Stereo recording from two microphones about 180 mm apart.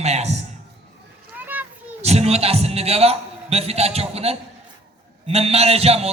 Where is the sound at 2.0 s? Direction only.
35° right (ahead or behind).